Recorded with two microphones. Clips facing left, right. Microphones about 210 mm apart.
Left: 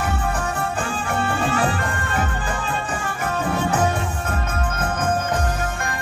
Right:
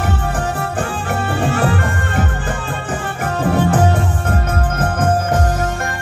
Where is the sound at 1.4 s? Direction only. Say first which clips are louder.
Right 4 dB; 50° right (ahead or behind).